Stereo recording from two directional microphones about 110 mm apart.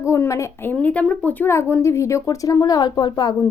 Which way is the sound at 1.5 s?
25° left (ahead or behind).